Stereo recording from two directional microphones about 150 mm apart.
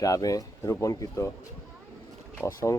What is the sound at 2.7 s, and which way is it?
Speech, 20° left (ahead or behind).